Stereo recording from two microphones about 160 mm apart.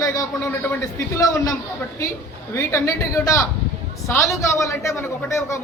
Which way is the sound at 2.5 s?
15° left (ahead or behind).